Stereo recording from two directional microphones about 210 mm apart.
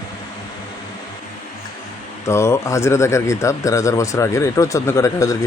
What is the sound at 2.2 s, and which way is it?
Speech, 15° left (ahead or behind).